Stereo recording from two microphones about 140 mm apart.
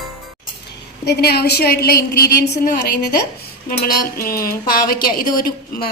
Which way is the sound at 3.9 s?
90° left.